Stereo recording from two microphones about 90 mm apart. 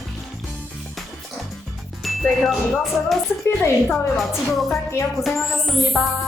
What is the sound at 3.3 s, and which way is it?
Speech, 30° left (ahead or behind).